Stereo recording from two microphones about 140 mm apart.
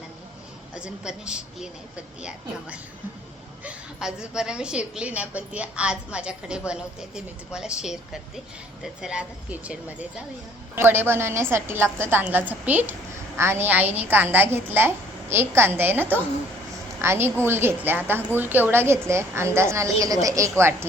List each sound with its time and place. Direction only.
0.8 s a woman's voice: 5° right (ahead or behind)
3.6 s a woman's voice: 5° right (ahead or behind)